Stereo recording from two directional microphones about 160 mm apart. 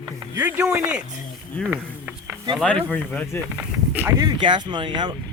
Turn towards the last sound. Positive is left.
turn(degrees=-30)  # may be behind; listen again after turning